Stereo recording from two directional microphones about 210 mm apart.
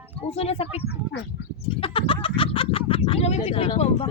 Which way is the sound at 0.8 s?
55° left (ahead or behind).